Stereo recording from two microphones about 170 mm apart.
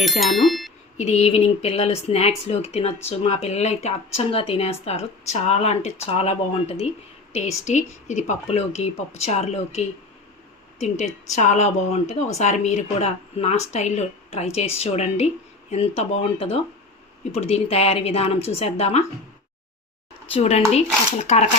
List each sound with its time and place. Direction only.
0.0 s speech: centre (ahead or behind)
0.9 s speech: 40° left (ahead or behind)
20.3 s speech: 40° left (ahead or behind)